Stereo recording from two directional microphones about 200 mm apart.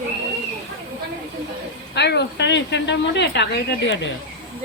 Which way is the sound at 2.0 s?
60° left (ahead or behind).